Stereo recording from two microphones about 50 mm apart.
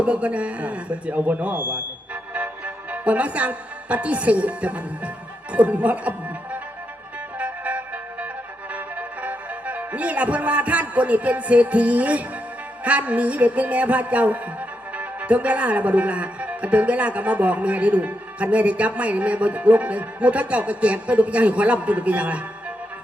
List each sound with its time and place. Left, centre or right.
0.0 s speech: right
7.3 s music: right
8.7 s speech: right